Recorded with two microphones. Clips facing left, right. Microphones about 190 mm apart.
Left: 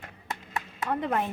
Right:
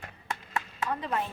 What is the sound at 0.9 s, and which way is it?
Speech, 55° left (ahead or behind).